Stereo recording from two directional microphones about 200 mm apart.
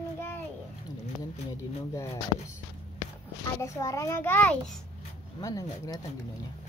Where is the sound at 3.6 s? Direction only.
15° left (ahead or behind).